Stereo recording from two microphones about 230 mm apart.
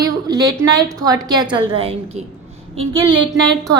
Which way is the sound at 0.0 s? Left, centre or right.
Centre.